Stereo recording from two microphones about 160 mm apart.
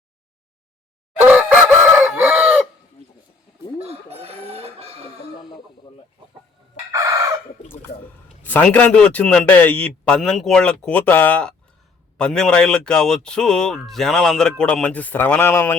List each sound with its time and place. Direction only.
1.2 s chicken: 10° right (ahead or behind)
3.8 s chicken: 40° right (ahead or behind)
5.4 s a sound: 30° left (ahead or behind)
6.9 s chicken: 20° right (ahead or behind)
8.4 s a man's voice: 10° left (ahead or behind)